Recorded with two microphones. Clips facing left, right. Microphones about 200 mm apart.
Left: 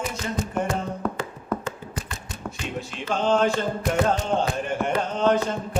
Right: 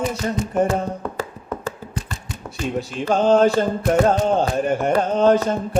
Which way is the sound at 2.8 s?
40° right (ahead or behind).